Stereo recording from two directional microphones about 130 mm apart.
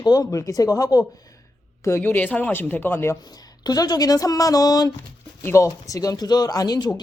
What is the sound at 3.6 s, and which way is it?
Speech, 30° left (ahead or behind).